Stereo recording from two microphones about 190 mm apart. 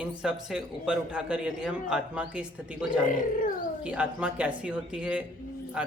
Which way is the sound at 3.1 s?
45° left (ahead or behind).